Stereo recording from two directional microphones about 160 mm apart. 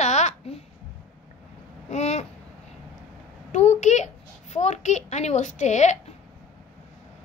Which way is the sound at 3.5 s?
45° left (ahead or behind).